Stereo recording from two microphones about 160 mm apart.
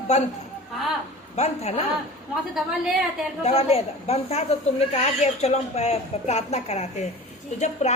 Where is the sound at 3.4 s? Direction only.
40° left (ahead or behind).